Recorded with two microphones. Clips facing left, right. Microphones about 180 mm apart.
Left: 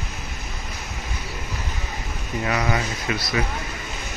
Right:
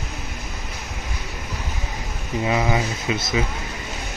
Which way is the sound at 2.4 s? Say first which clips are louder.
Right 3 dB; 15° right (ahead or behind).